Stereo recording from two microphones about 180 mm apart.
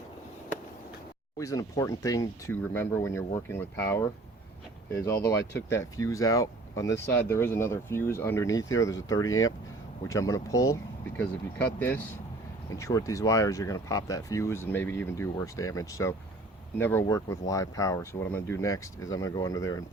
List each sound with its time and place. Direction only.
1.4 s speech: 20° left (ahead or behind)